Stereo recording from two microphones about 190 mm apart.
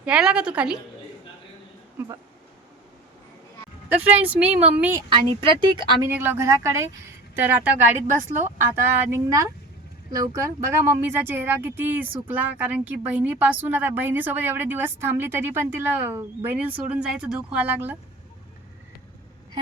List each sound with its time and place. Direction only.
0.0 s a woman's voice: 5° right (ahead or behind)
4.0 s a woman's voice: 10° right (ahead or behind)
5.0 s speech: 25° right (ahead or behind)
6.1 s a woman's voice: 10° right (ahead or behind)